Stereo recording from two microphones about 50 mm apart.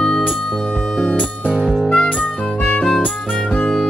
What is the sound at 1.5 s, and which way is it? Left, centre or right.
Music, centre.